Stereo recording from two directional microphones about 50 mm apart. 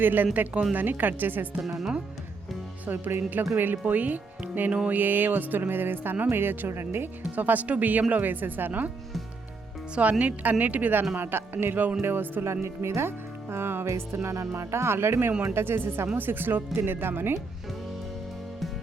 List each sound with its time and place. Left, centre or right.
0.0 s speech: right
1.6 s speech: centre
2.8 s speech: right
7.2 s speech: right
9.9 s speech: right
11.2 s speech: right
12.6 s speech: right
13.8 s music: right
15.4 s speech: right